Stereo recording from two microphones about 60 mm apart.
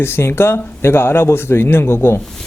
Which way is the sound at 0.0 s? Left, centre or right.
Left.